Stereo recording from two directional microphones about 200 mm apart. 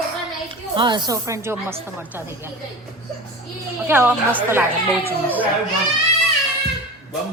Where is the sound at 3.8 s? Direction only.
10° right (ahead or behind).